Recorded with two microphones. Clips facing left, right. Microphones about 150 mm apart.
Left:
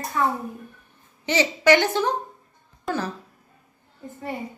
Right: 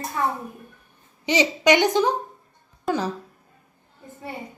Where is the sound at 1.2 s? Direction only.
15° right (ahead or behind).